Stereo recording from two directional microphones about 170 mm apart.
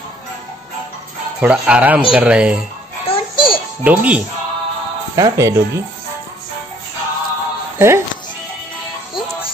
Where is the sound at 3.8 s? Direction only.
10° right (ahead or behind).